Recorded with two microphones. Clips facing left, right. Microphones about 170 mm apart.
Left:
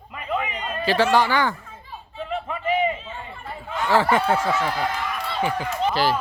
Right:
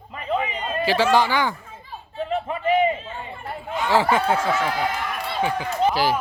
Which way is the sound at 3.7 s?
15° right (ahead or behind).